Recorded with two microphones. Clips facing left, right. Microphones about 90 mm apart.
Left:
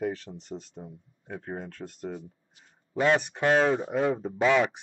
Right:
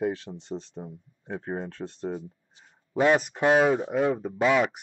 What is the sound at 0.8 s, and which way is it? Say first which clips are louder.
Speech: right 4 dB; 35° right (ahead or behind).